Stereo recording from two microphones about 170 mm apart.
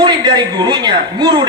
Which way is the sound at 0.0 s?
25° right (ahead or behind).